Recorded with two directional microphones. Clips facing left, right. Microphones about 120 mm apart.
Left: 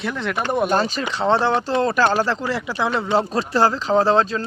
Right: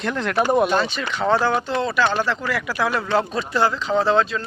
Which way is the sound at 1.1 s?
30° left (ahead or behind).